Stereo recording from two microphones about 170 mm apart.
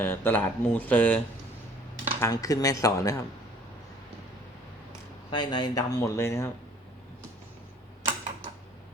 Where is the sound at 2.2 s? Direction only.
20° left (ahead or behind).